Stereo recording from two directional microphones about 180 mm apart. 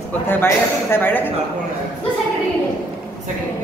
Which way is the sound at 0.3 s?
10° left (ahead or behind).